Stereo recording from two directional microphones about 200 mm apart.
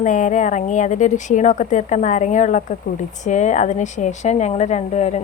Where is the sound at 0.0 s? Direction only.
40° left (ahead or behind).